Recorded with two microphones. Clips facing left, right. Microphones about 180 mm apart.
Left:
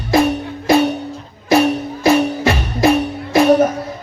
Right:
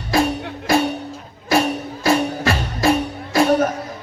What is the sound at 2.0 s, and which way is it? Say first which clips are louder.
Music: left 4 dB; 20° left (ahead or behind).